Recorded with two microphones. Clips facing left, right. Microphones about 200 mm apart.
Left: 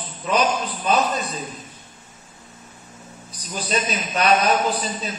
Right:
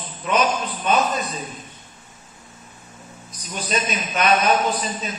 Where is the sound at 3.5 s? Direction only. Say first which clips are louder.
Even; 35° left (ahead or behind).